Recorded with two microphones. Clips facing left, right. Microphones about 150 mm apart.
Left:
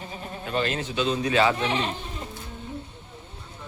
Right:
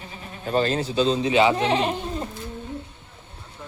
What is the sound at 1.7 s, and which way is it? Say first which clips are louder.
Speech: right 5 dB; 40° right (ahead or behind).